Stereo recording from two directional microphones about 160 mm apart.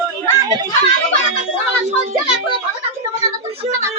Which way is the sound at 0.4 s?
25° right (ahead or behind).